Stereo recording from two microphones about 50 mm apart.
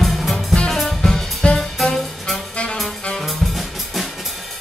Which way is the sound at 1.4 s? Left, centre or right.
Left.